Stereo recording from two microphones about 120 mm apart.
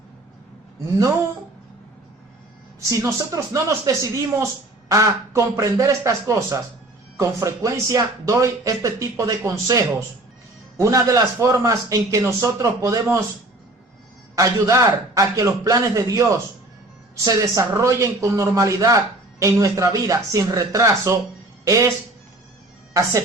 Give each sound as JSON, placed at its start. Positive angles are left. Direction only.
{"t": 2.9, "sound": "a man's voice", "side_deg": -25}
{"t": 14.3, "sound": "a man's voice", "side_deg": -25}